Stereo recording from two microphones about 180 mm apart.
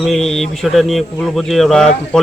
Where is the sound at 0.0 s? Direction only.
Centre (ahead or behind).